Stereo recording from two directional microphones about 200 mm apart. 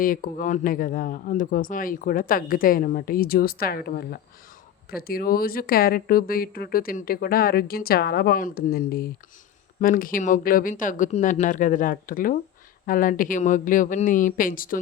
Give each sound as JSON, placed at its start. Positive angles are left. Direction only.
{"t": 0.0, "sound": "speech", "side_deg": 45}